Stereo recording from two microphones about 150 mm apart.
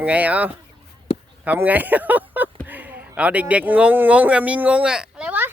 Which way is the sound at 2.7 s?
10° right (ahead or behind).